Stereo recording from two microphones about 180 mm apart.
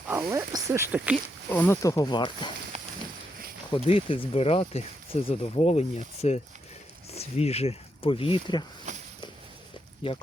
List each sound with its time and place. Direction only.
0.1 s speech: 15° right (ahead or behind)
1.5 s speech: 10° left (ahead or behind); by 2.5 s 25° left (ahead or behind)
2.7 s a sound: 35° right (ahead or behind)
3.8 s speech: 35° left (ahead or behind)
8.9 s walk: 40° right (ahead or behind)
10.0 s speech: 30° left (ahead or behind)